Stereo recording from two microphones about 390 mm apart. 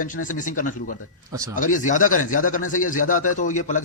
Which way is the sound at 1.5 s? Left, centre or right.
Centre.